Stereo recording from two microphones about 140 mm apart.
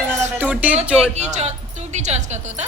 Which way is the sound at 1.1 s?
55° right (ahead or behind).